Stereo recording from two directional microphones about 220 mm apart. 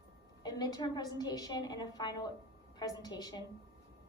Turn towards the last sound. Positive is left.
turn(degrees=20)  # may be behind; listen again after turning